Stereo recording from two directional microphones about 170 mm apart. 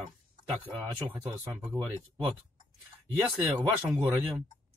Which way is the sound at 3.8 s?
10° right (ahead or behind).